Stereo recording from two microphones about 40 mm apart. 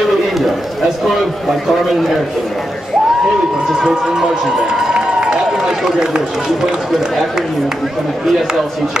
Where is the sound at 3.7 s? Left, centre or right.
Centre.